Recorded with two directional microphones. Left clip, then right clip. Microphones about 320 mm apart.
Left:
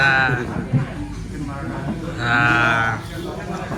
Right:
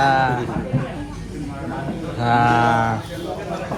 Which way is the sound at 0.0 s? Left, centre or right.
Centre.